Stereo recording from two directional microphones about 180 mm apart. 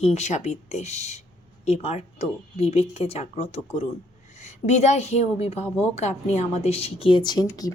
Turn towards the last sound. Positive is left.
turn(degrees=20)  # may be behind; listen again after turning